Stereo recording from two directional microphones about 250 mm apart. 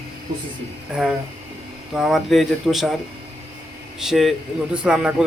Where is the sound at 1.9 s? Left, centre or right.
Centre.